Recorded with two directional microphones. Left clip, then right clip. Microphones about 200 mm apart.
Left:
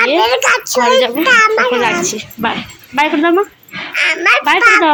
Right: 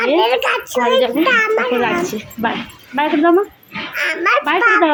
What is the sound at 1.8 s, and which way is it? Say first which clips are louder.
Speech: left 3 dB; 5° left (ahead or behind).